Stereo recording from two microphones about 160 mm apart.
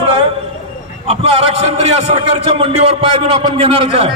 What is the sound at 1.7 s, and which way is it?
A man's voice, 45° right (ahead or behind).